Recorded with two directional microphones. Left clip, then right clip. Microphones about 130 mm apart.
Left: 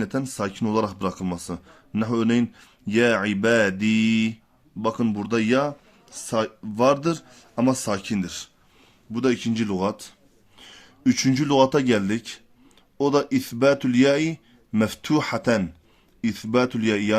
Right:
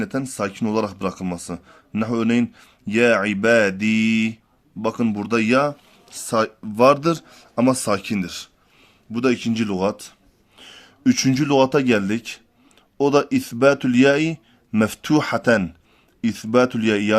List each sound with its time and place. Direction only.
0.0 s a man's voice: 10° right (ahead or behind); by 17.2 s 25° right (ahead or behind)